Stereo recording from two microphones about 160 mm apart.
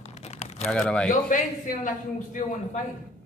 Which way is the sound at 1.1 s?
55° left (ahead or behind).